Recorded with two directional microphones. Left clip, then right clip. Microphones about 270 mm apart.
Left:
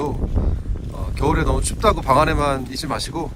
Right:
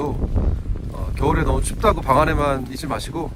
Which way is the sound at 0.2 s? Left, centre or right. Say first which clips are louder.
Even; centre.